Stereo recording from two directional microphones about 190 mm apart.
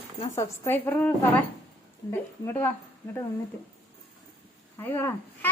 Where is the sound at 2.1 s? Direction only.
10° left (ahead or behind).